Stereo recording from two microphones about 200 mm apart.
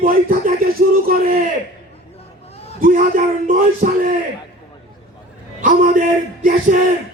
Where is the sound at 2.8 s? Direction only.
40° right (ahead or behind).